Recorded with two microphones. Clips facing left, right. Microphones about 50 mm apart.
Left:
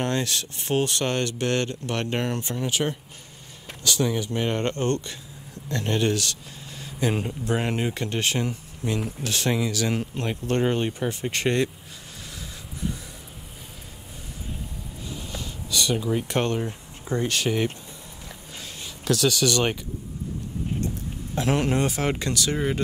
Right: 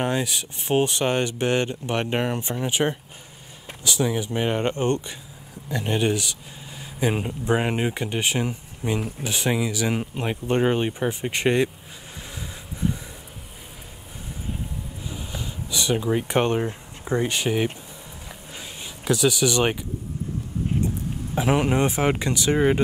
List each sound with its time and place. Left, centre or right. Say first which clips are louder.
0.0 s speech: right 1 dB; centre
15.0 s a sound: even; centre
21.4 s speech: right 2 dB; centre